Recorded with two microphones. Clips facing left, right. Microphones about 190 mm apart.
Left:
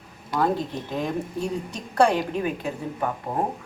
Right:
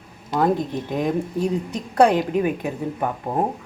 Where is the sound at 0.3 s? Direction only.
20° right (ahead or behind).